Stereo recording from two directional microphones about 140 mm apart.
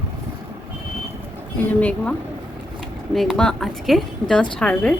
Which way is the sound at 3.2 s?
5° left (ahead or behind).